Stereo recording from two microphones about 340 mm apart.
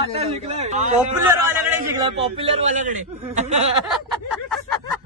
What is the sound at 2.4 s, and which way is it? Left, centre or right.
A man's voice, centre.